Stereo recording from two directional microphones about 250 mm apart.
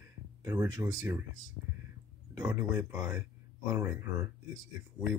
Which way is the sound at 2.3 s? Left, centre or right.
Centre.